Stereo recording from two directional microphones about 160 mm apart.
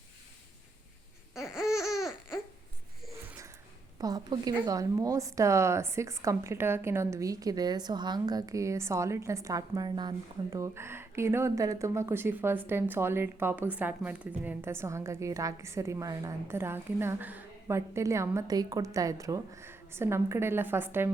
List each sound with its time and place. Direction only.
1.4 s laughter: 5° right (ahead or behind)
3.2 s a sound: 20° right (ahead or behind)
3.9 s a woman's voice: 25° right (ahead or behind)